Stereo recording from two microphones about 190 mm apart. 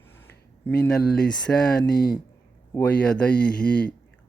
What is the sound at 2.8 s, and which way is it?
Speech, 5° left (ahead or behind).